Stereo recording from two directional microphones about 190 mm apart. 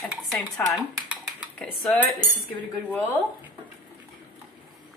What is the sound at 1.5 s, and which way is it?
Speech, 10° left (ahead or behind).